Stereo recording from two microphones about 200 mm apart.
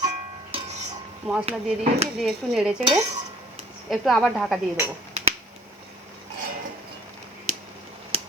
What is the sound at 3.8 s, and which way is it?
Speech, centre (ahead or behind).